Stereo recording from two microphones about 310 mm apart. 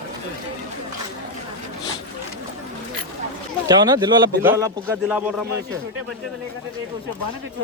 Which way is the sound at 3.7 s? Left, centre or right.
Centre.